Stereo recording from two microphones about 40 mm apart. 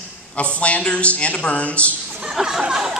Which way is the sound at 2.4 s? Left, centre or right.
Centre.